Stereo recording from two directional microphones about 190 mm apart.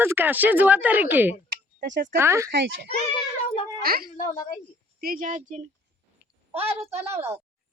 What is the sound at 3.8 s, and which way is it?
Speech, 50° right (ahead or behind).